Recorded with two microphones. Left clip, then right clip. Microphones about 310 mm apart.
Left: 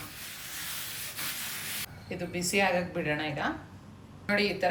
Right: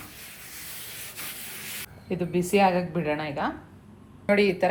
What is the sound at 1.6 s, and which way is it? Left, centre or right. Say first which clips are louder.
Spray: even; centre.